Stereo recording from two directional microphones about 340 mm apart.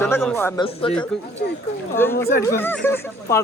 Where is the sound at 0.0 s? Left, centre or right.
Centre.